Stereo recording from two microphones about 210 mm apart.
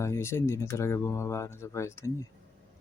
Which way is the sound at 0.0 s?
15° left (ahead or behind).